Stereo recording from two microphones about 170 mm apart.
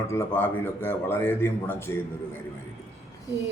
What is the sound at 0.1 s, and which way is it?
A man's voice, 15° left (ahead or behind).